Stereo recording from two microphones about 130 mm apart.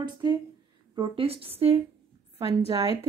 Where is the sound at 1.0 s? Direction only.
45° right (ahead or behind).